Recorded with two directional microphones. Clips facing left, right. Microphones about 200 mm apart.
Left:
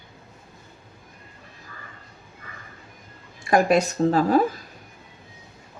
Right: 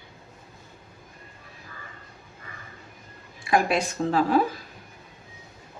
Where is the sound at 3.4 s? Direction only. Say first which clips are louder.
Left 4 dB; 40° left (ahead or behind).